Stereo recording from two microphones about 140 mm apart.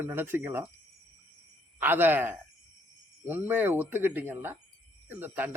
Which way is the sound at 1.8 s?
15° right (ahead or behind).